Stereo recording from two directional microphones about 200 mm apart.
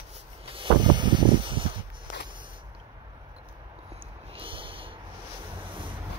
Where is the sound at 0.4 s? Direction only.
25° right (ahead or behind).